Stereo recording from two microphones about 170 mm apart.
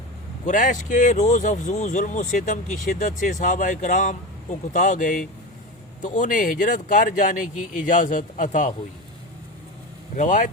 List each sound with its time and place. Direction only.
0.4 s speech: 50° left (ahead or behind)
10.2 s speech: 45° left (ahead or behind)